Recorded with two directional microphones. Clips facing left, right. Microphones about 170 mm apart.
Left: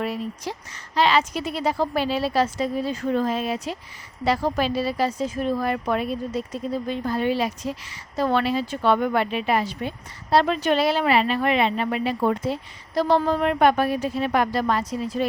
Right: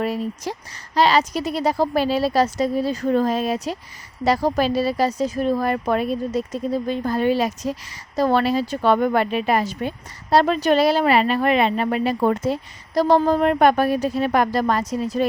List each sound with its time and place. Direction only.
0.0 s speech: 40° right (ahead or behind)